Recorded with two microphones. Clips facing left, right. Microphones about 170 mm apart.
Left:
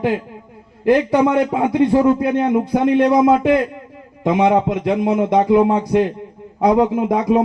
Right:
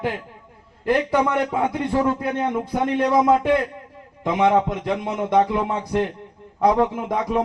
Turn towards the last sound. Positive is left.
turn(degrees=15)  # may be behind; listen again after turning